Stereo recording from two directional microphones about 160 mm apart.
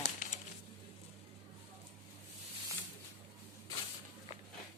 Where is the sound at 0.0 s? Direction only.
50° left (ahead or behind).